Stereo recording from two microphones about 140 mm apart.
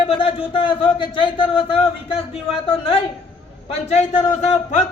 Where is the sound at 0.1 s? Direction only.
40° left (ahead or behind).